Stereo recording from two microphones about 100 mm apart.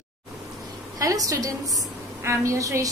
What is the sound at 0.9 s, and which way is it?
A woman's voice, 35° right (ahead or behind).